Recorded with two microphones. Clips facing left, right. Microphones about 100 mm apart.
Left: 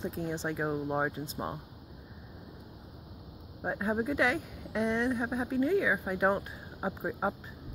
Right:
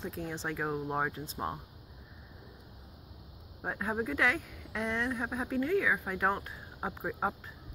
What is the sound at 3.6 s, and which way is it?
Speech, 10° left (ahead or behind).